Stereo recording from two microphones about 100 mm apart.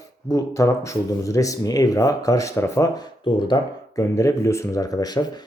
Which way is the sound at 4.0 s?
30° left (ahead or behind).